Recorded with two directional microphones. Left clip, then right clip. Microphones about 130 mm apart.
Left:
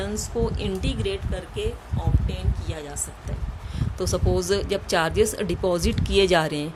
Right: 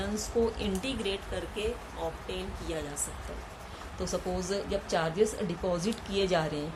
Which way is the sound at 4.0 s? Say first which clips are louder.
Left 8 dB; 85° left.